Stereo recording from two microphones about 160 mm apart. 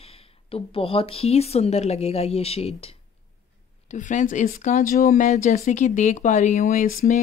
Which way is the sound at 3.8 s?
50° left (ahead or behind).